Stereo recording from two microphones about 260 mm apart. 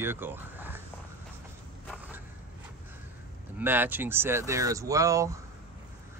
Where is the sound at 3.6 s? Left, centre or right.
Centre.